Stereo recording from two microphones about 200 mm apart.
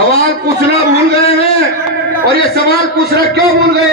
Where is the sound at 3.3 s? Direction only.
55° right (ahead or behind).